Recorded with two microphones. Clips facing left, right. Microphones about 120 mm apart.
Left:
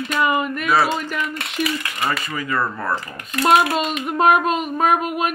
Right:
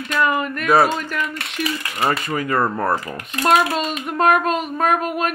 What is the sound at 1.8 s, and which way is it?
Speech, 35° right (ahead or behind).